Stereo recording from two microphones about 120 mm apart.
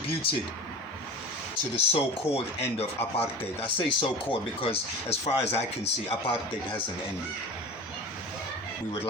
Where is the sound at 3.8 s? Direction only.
45° left (ahead or behind).